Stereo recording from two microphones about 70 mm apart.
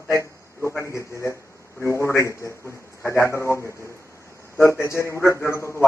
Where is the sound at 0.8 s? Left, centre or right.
Left.